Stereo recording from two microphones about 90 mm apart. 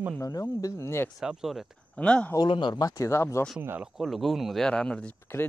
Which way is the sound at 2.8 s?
35° left (ahead or behind).